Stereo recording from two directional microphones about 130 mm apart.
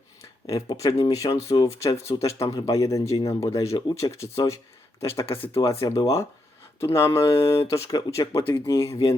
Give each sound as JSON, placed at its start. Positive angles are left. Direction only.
{"t": 0.4, "sound": "speech", "side_deg": 25}
{"t": 5.2, "sound": "speech", "side_deg": 45}
{"t": 5.8, "sound": "speech", "side_deg": 25}